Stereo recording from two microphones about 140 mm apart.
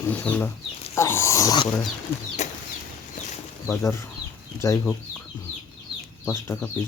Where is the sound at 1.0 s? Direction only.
20° left (ahead or behind).